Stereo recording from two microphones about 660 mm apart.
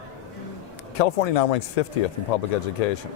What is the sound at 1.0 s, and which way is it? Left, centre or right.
Speech, left.